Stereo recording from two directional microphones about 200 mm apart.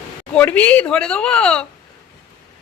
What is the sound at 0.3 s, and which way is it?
A woman's voice, 5° left (ahead or behind).